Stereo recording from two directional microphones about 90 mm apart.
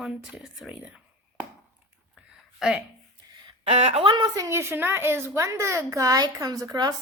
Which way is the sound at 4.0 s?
55° right (ahead or behind).